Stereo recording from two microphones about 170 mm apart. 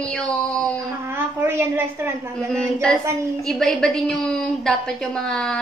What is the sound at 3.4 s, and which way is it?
A woman's voice, centre (ahead or behind).